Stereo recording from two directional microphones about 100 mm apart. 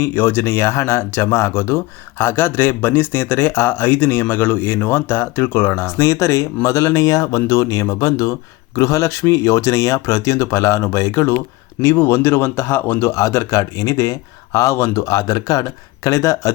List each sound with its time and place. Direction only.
0.0 s speech: 20° left (ahead or behind)